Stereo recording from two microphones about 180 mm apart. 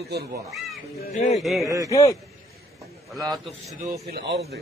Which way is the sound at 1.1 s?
35° left (ahead or behind).